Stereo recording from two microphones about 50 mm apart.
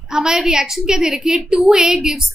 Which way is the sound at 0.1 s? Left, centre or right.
Centre.